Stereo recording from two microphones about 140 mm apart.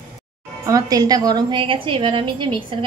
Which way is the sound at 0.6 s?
25° right (ahead or behind).